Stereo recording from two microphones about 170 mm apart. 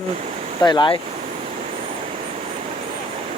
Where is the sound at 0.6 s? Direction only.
25° left (ahead or behind).